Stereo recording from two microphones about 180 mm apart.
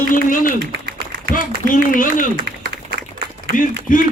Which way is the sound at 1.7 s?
50° left (ahead or behind).